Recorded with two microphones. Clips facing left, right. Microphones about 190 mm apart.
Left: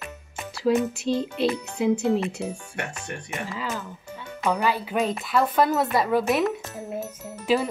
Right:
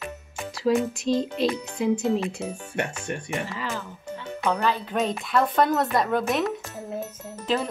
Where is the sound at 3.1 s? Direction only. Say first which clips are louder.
Right 4 dB; 25° right (ahead or behind).